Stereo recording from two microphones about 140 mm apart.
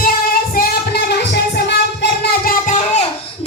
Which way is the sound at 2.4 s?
60° left (ahead or behind).